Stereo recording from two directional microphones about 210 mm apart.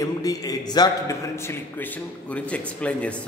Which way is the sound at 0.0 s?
15° left (ahead or behind).